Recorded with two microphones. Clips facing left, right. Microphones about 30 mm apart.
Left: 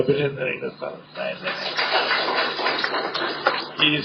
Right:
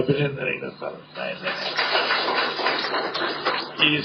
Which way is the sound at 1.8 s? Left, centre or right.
Left.